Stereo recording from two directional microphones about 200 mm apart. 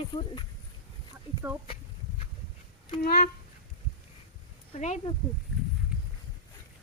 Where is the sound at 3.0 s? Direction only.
50° left (ahead or behind).